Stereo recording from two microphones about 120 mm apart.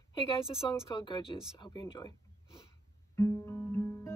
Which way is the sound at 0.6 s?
35° left (ahead or behind).